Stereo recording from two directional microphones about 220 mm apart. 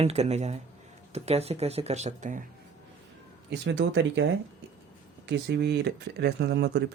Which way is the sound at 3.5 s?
55° right (ahead or behind).